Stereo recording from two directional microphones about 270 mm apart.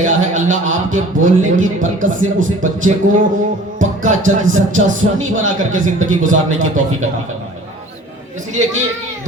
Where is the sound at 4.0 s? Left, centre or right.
Right.